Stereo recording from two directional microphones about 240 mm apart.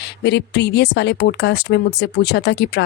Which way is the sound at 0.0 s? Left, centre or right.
Left.